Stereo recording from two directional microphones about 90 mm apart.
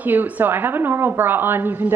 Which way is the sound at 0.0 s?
20° right (ahead or behind).